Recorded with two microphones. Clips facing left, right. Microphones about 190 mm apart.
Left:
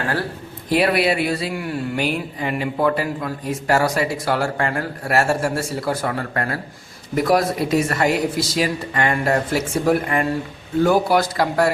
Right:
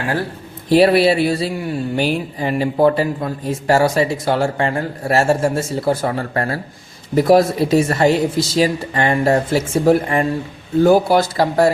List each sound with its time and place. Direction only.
0.7 s speech: 30° right (ahead or behind)